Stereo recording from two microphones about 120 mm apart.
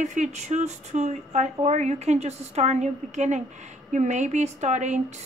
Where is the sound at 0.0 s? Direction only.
85° right.